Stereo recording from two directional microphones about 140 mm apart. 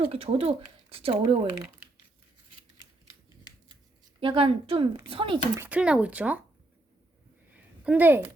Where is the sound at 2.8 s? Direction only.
30° left (ahead or behind).